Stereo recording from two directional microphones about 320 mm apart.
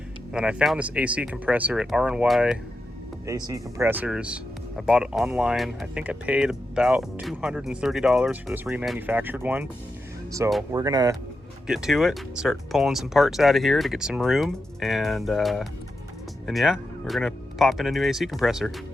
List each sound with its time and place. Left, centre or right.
0.3 s speech: centre